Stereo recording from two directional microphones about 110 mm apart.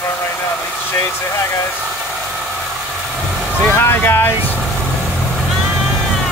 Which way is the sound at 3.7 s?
20° left (ahead or behind).